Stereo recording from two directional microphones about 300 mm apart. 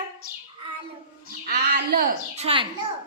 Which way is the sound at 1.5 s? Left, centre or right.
Right.